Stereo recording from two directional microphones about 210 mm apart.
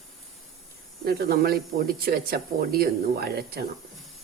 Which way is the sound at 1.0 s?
45° right (ahead or behind).